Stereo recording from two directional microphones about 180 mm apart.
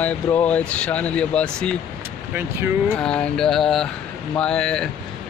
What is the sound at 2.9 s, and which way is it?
Speech, 5° left (ahead or behind).